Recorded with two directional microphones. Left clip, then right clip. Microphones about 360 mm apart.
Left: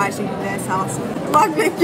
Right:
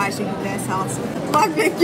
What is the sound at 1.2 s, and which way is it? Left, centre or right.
Speech, centre.